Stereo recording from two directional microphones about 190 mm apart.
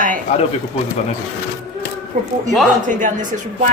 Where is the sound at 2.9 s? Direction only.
40° right (ahead or behind).